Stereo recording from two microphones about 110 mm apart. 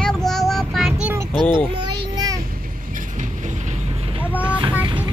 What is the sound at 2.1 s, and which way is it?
Child singing, 35° right (ahead or behind).